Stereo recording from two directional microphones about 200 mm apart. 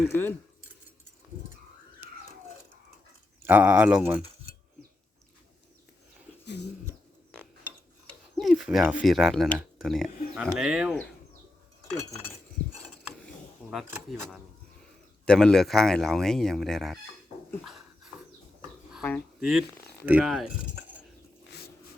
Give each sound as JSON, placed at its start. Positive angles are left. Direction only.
{"t": 0.1, "sound": "speech", "side_deg": 10}
{"t": 3.4, "sound": "speech", "side_deg": -10}
{"t": 6.4, "sound": "dog", "side_deg": 60}
{"t": 8.4, "sound": "speech", "side_deg": 0}
{"t": 13.6, "sound": "a sound", "side_deg": -5}
{"t": 14.1, "sound": "speech", "side_deg": 0}
{"t": 17.7, "sound": "dog", "side_deg": 0}
{"t": 19.0, "sound": "speech", "side_deg": 5}